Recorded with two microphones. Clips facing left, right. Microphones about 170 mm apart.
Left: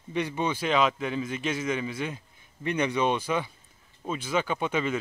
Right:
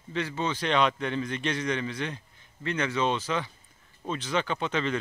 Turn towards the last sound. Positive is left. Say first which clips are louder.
# left 1 dB
turn(degrees=10)  # may be behind; listen again after turning